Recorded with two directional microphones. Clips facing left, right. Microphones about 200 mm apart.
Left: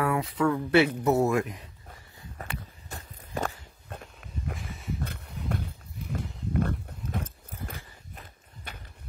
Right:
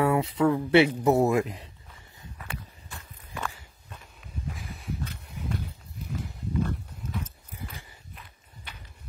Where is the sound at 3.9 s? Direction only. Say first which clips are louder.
Left 5 dB; 60° left (ahead or behind).